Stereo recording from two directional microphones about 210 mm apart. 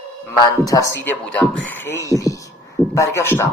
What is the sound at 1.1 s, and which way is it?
Speech, 5° left (ahead or behind).